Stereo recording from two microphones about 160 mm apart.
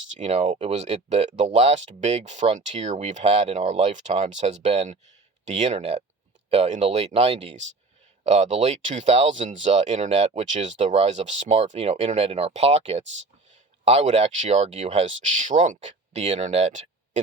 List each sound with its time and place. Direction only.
0.1 s speech: 45° right (ahead or behind)